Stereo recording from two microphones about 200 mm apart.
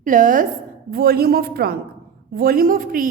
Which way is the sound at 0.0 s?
40° right (ahead or behind).